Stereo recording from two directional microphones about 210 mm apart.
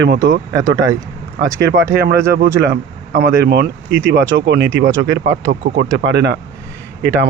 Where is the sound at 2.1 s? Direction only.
50° right (ahead or behind).